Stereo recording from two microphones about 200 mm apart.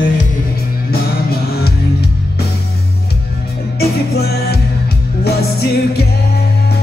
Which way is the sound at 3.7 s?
50° left (ahead or behind).